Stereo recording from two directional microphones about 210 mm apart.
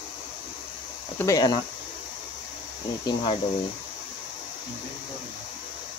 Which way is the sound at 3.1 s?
20° left (ahead or behind).